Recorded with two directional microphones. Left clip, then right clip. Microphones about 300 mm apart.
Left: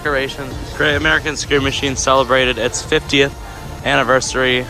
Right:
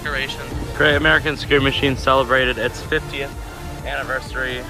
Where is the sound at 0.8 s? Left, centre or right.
Centre.